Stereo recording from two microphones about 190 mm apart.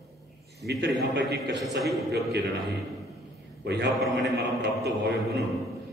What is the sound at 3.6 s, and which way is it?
Mantra, 60° right (ahead or behind).